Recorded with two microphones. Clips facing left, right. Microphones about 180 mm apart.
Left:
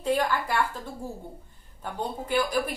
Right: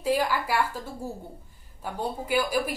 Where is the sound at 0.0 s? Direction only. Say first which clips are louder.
Even; 5° right (ahead or behind).